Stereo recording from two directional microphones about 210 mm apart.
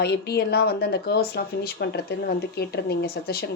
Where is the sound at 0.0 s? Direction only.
50° left (ahead or behind).